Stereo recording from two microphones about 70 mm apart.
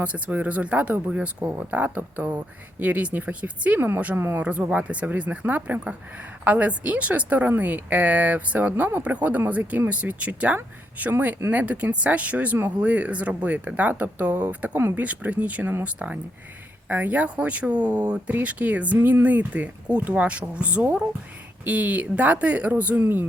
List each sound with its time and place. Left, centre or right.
0.0 s speech: right
3.8 s speech: right
4.4 s speech: centre